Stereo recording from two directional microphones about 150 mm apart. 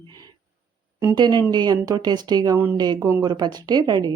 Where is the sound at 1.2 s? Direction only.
30° right (ahead or behind).